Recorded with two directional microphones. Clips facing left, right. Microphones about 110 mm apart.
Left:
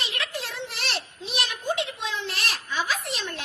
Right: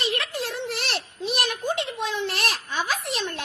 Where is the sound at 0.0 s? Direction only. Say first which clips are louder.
Right 5 dB; 45° right (ahead or behind).